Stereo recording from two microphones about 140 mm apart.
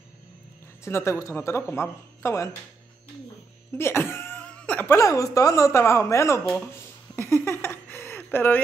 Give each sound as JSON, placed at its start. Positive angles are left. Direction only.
{"t": 0.8, "sound": "speech", "side_deg": 20}
{"t": 3.7, "sound": "speech", "side_deg": 15}
{"t": 6.7, "sound": "a sound", "side_deg": 15}